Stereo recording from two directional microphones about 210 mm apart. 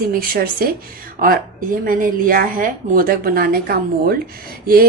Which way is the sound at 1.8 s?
40° right (ahead or behind).